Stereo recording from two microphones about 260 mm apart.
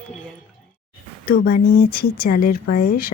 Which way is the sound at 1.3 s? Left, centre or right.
Left.